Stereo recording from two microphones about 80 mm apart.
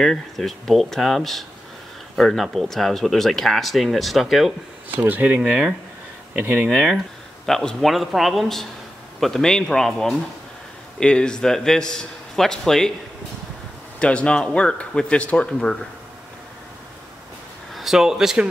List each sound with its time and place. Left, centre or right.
0.0 s speech: centre
5.0 s speech: centre
5.4 s speech: centre
7.4 s a man's voice: centre
13.9 s a man's voice: centre
17.7 s speech: centre